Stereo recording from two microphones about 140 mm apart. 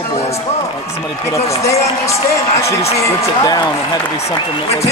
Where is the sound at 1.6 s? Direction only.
20° left (ahead or behind).